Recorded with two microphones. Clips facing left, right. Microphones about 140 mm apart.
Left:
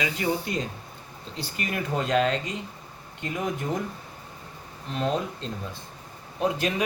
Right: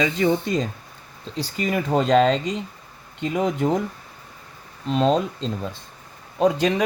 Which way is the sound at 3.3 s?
90° right.